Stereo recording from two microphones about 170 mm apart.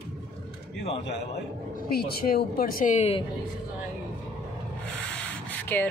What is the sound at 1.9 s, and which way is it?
Speech, 65° left (ahead or behind).